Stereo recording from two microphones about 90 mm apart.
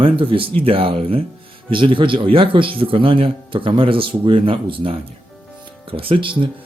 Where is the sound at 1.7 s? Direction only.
70° right (ahead or behind).